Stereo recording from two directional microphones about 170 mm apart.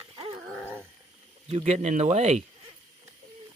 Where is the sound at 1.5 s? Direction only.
40° right (ahead or behind).